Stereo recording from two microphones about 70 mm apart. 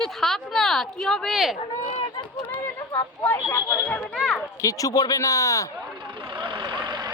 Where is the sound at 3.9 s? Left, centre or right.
Centre.